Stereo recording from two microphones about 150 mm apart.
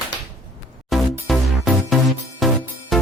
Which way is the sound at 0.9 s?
Centre (ahead or behind).